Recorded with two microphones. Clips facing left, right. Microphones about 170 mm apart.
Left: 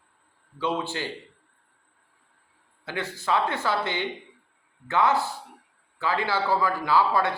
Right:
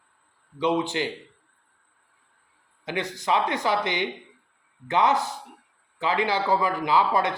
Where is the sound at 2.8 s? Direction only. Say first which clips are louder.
Right 2 dB; 15° right (ahead or behind).